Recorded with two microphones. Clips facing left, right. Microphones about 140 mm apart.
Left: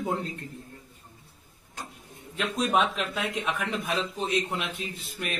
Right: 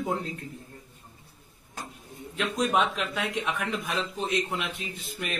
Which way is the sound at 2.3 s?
Centre (ahead or behind).